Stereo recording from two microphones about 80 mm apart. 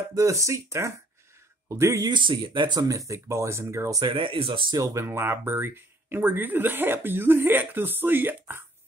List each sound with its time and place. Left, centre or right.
0.1 s speech: right
2.0 s speech: right
2.8 s speech: right
4.0 s speech: right
4.7 s speech: right